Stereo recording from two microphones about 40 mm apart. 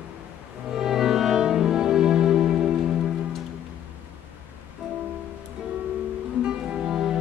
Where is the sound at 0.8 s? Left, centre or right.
Centre.